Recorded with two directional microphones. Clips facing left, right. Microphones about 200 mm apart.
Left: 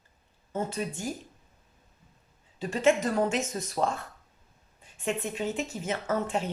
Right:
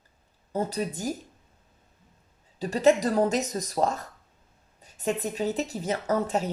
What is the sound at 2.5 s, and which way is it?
A woman's voice, 40° right (ahead or behind).